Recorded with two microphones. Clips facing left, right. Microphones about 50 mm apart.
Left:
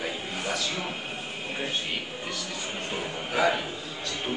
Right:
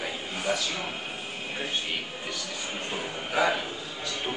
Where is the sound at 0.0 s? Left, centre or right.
Centre.